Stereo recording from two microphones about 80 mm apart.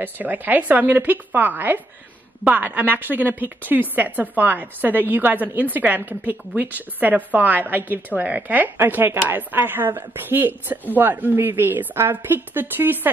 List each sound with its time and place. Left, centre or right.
0.0 s a woman's voice: right